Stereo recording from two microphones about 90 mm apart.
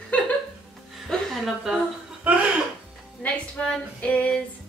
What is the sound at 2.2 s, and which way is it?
Chuckle, 15° right (ahead or behind).